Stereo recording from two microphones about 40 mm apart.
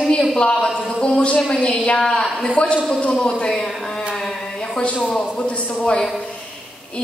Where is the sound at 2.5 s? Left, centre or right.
Left.